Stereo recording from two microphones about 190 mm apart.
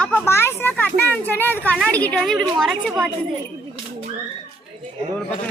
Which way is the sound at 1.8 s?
5° left (ahead or behind).